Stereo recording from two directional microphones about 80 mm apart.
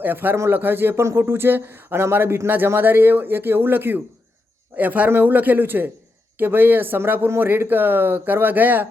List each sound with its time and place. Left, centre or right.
0.0 s a man's voice: right